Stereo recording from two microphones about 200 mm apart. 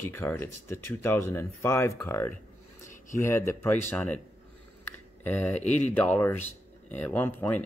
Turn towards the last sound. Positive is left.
turn(degrees=10)  # may be behind; listen again after turning